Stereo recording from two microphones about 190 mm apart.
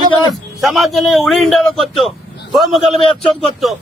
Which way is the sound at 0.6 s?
Centre (ahead or behind).